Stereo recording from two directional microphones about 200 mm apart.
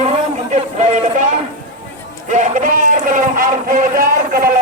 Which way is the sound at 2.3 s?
40° right (ahead or behind).